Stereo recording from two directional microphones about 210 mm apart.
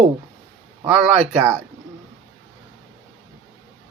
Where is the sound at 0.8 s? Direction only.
5° right (ahead or behind).